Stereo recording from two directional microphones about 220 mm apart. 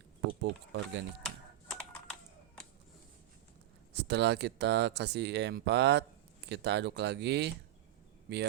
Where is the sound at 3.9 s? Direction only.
50° right (ahead or behind).